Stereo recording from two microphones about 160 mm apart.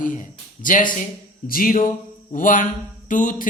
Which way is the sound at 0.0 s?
55° left (ahead or behind).